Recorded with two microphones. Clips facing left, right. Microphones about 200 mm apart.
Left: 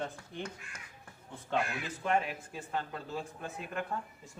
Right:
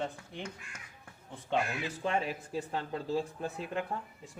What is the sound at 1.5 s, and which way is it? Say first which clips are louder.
Speech: right 1 dB; 50° right (ahead or behind).